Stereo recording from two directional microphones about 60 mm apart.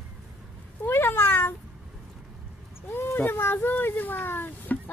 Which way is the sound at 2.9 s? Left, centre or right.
Left.